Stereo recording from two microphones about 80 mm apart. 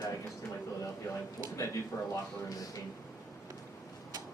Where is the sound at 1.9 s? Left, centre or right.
Left.